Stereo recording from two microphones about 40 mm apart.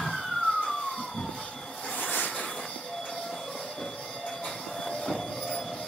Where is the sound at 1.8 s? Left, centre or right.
Left.